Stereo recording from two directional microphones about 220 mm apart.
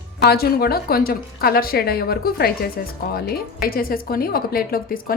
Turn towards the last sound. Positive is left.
turn(degrees=40)  # may be behind; listen again after turning